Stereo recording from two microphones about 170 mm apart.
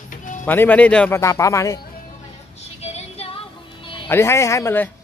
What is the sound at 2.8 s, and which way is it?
Female singing, 40° left (ahead or behind).